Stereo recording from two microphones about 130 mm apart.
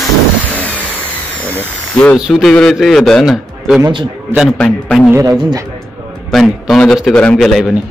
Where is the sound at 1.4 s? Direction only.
10° left (ahead or behind).